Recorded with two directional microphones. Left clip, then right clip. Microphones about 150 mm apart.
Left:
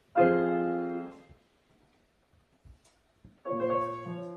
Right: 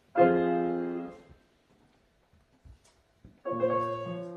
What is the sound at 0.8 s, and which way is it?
Music, 15° right (ahead or behind).